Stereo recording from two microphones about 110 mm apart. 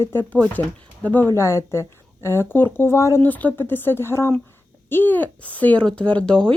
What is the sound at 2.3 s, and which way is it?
Speech, 20° left (ahead or behind).